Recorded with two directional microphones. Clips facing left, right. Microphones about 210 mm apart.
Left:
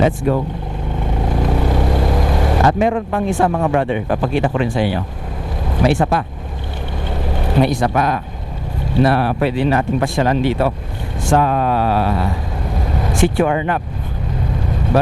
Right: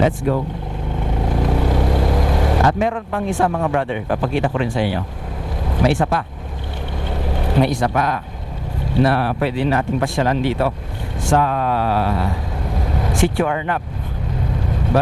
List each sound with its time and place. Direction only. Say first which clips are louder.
1.3 s vehicle: left 1 dB; 25° left (ahead or behind)
4.2 s speech: left 2 dB; 15° left (ahead or behind)
7.6 s speech: left 2 dB; 15° left (ahead or behind)
13.3 s speech: left 3 dB; 15° left (ahead or behind)